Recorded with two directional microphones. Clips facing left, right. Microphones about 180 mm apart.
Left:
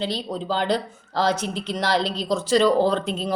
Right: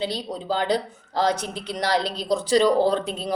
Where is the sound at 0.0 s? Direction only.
10° right (ahead or behind).